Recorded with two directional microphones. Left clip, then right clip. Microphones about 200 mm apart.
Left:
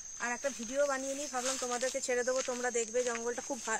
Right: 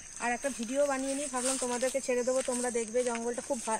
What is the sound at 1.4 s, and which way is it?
Speech, 55° right (ahead or behind).